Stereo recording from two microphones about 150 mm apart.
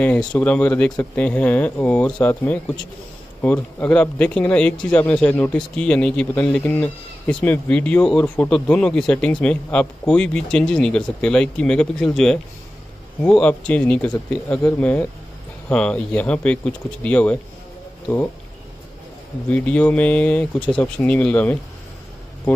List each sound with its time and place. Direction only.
0.3 s speech: 10° left (ahead or behind)
19.5 s speech: 10° left (ahead or behind)